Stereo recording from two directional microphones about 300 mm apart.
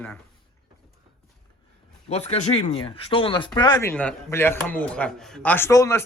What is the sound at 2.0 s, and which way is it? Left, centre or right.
Speech, left.